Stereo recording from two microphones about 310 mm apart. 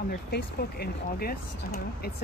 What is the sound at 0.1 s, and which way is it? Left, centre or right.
Speech, left.